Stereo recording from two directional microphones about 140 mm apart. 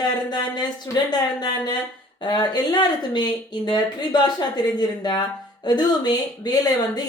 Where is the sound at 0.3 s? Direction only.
30° left (ahead or behind).